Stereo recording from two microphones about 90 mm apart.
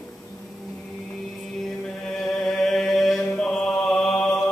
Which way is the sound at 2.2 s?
5° left (ahead or behind).